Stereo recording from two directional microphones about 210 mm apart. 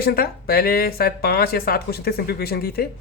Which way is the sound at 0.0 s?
45° left (ahead or behind).